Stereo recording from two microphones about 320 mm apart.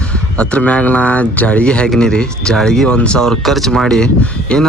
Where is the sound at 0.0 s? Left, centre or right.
Centre.